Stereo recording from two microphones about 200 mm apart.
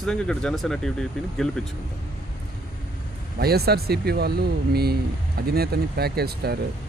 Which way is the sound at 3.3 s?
50° right (ahead or behind).